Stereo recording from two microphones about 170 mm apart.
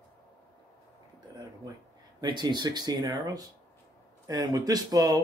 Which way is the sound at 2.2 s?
25° right (ahead or behind).